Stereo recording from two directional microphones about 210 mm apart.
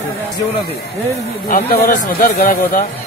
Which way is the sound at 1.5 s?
45° left (ahead or behind).